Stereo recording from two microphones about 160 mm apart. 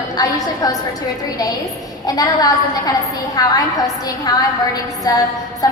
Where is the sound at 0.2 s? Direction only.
20° left (ahead or behind).